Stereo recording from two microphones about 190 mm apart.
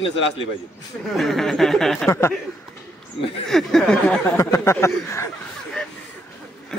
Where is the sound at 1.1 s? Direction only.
Centre (ahead or behind).